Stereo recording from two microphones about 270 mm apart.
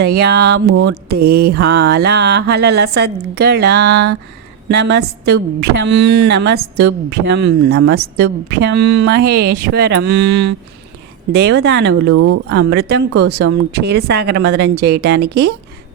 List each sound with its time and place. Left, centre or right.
0.0 s a woman's voice: right
12.1 s speech: right
12.5 s a woman's voice: right